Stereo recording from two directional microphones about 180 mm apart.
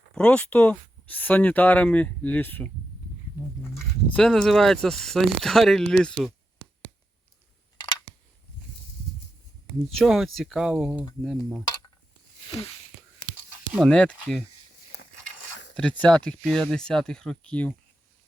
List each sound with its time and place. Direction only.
0.1 s speech: 5° left (ahead or behind)
3.8 s speech: 5° left (ahead or behind)
9.9 s speech: centre (ahead or behind)
13.7 s speech: 5° left (ahead or behind)
14.9 s a sound: 65° left (ahead or behind)
15.7 s speech: 5° left (ahead or behind)